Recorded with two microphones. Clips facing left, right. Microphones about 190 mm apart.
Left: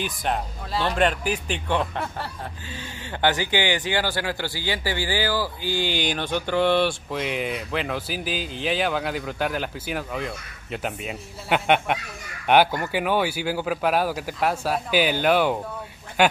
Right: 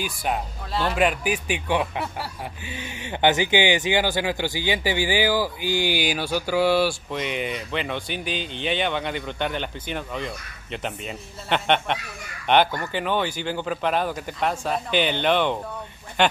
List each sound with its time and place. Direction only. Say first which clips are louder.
0.0 s a man's voice: even; 5° right (ahead or behind)